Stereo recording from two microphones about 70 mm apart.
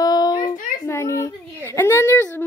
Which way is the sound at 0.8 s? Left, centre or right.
Left.